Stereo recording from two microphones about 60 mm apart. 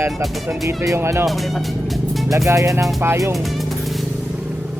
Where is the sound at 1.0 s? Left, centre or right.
Right.